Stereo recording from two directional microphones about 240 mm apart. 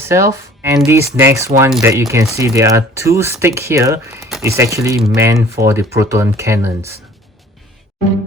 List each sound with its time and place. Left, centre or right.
0.1 s speech: centre